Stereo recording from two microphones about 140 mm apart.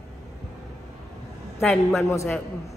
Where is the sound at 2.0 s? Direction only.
20° left (ahead or behind).